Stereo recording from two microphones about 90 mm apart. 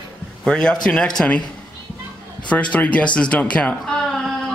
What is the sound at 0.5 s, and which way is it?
Speech, 10° left (ahead or behind).